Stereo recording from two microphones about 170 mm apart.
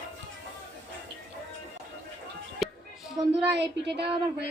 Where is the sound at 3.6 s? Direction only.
85° right.